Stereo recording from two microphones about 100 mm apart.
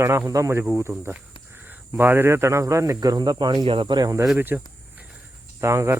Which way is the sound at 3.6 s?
60° right (ahead or behind).